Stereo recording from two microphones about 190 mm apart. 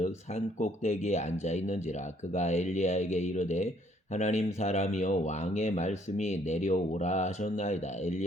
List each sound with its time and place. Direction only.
0.0 s speech: 35° left (ahead or behind)